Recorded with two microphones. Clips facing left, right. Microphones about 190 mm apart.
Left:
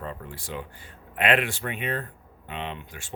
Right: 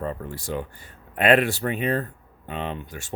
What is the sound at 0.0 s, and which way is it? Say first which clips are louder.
A man's voice: right 6 dB; 40° right (ahead or behind).